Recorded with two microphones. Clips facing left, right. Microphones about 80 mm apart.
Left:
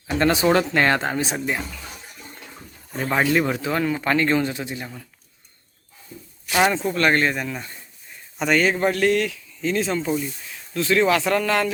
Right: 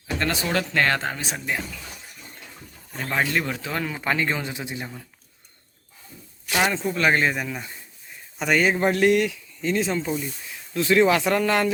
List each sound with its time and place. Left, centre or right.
0.2 s speech: left
2.9 s speech: centre
6.5 s speech: centre
10.8 s speech: centre